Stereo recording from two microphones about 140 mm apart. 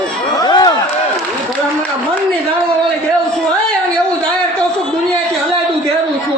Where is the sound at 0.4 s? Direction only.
30° left (ahead or behind).